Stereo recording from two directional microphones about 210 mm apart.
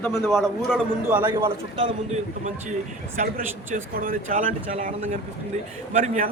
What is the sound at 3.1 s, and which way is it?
Speech, 40° right (ahead or behind).